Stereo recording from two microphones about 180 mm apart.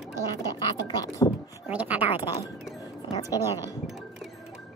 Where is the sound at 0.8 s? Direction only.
20° left (ahead or behind).